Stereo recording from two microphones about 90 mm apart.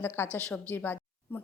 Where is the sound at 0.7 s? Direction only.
20° left (ahead or behind).